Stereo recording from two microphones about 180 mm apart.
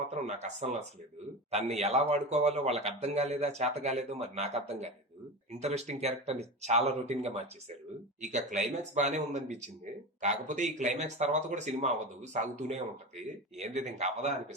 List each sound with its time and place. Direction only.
0.1 s speech: 40° right (ahead or behind)